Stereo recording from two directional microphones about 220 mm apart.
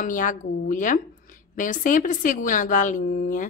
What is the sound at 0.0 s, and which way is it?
A woman's voice, 35° left (ahead or behind).